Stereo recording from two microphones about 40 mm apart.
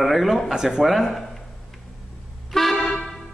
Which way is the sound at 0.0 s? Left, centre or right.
Centre.